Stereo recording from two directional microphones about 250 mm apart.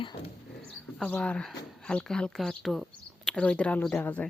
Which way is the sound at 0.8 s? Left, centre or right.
Centre.